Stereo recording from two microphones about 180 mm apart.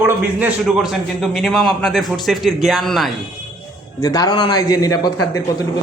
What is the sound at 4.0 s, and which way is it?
A man's voice, 20° left (ahead or behind).